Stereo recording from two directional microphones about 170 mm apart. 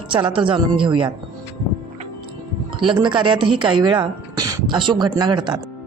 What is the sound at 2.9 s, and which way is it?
Speech, 30° right (ahead or behind).